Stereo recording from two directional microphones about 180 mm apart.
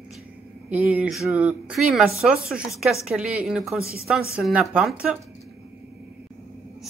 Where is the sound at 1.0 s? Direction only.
Centre (ahead or behind).